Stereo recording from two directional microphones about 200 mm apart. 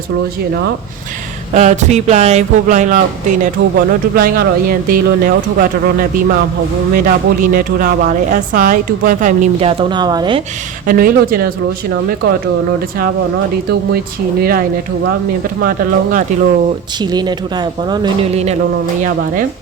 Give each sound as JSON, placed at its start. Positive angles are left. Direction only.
{"t": 1.5, "sound": "a woman's voice", "side_deg": -35}
{"t": 10.8, "sound": "speech", "side_deg": -45}
{"t": 13.7, "sound": "speech", "side_deg": -50}
{"t": 15.6, "sound": "speech", "side_deg": -45}
{"t": 17.0, "sound": "speech", "side_deg": -20}